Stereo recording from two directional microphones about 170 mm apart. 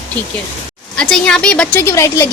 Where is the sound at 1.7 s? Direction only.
15° left (ahead or behind).